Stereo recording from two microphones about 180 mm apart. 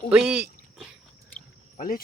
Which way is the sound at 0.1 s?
5° right (ahead or behind).